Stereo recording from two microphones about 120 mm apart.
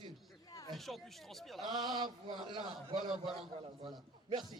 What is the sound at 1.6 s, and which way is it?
A man's voice, 35° right (ahead or behind).